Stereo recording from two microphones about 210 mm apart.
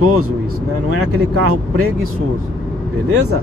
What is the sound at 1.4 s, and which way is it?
Speech, 90° right.